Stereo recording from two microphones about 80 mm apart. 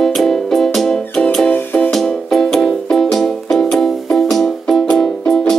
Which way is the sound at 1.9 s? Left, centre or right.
Centre.